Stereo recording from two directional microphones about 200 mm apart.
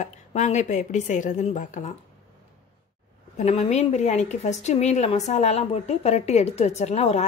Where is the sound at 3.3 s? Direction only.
35° left (ahead or behind).